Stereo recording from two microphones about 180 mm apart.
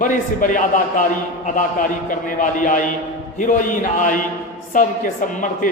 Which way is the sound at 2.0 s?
45° left (ahead or behind).